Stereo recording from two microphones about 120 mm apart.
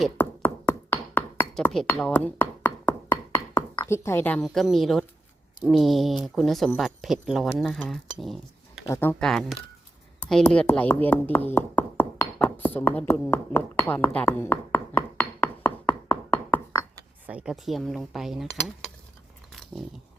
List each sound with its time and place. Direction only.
0.2 s a sound: 20° left (ahead or behind)
1.6 s speech: 5° left (ahead or behind)
2.4 s wood block: 20° left (ahead or behind)
3.8 s speech: 20° left (ahead or behind)
4.4 s speech: centre (ahead or behind)
8.9 s speech: 20° left (ahead or behind)
9.1 s speech: 5° left (ahead or behind)
16.3 s a sound: 15° left (ahead or behind)
17.2 s speech: 10° right (ahead or behind)
17.5 s speech: centre (ahead or behind)